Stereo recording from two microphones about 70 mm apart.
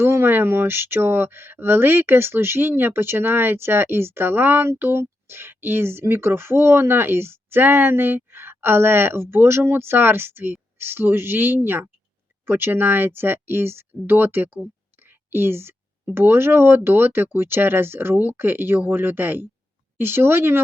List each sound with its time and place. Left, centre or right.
0.0 s speech: right